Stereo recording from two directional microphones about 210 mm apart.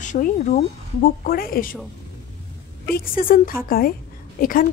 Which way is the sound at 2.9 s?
40° left (ahead or behind).